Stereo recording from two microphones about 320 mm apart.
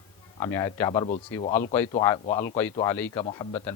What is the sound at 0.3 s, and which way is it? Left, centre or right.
Speech, centre.